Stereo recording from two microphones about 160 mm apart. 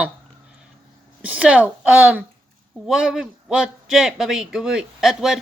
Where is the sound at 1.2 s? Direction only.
10° right (ahead or behind).